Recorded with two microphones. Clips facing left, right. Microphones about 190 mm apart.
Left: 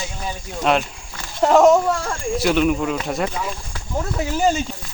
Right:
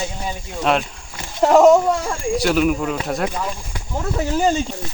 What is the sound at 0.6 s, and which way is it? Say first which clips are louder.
Speech: even; centre (ahead or behind).